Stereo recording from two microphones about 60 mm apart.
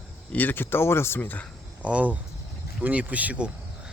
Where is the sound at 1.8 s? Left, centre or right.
Right.